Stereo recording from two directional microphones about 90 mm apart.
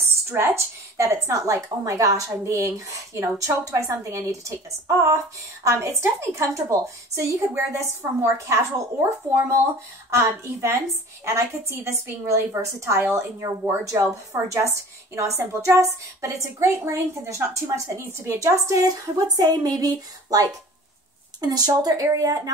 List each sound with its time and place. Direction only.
0.0 s a woman's voice: 30° right (ahead or behind)
10.1 s a woman's voice: 30° right (ahead or behind)